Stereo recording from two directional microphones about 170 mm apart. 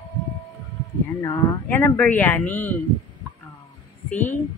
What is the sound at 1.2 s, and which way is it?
Speech, 20° left (ahead or behind).